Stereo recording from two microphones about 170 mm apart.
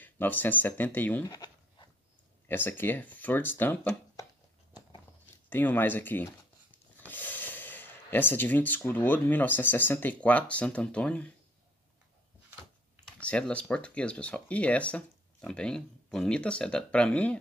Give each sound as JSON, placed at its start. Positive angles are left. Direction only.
{"t": 0.0, "sound": "speech", "side_deg": 10}
{"t": 1.2, "sound": "speech", "side_deg": 25}
{"t": 2.4, "sound": "speech", "side_deg": 10}
{"t": 5.5, "sound": "speech", "side_deg": 10}
{"t": 13.2, "sound": "speech", "side_deg": 5}